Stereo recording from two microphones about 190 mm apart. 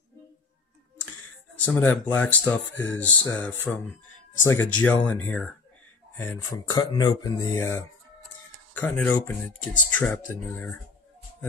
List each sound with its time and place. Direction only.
1.7 s speech: 10° left (ahead or behind)
6.5 s speech: 20° left (ahead or behind)